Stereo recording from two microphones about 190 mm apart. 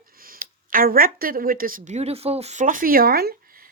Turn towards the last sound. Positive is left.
turn(degrees=-50)  # may be behind; listen again after turning